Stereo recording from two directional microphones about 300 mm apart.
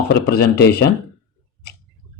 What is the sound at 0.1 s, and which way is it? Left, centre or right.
Speech, left.